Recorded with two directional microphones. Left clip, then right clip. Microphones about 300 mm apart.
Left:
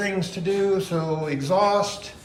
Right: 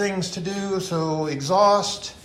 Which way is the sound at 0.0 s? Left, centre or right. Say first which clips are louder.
Even; centre.